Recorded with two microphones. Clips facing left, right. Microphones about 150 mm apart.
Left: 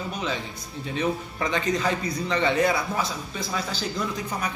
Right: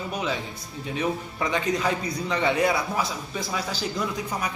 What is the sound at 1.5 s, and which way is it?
A man's voice, 5° right (ahead or behind).